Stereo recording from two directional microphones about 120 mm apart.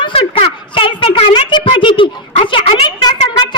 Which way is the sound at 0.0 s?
50° left (ahead or behind).